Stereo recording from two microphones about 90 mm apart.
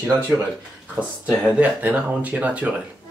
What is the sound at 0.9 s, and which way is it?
Speech, 10° right (ahead or behind).